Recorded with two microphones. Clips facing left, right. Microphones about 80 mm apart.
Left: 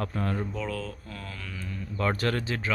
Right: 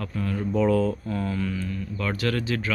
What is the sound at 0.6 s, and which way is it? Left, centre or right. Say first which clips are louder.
Speech: right 12 dB; right.